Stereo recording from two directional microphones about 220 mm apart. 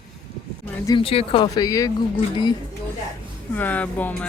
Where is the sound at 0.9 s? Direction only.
25° left (ahead or behind).